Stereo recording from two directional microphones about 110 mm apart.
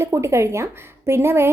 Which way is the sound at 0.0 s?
25° right (ahead or behind).